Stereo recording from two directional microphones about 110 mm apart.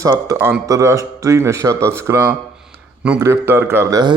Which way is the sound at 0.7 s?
30° right (ahead or behind).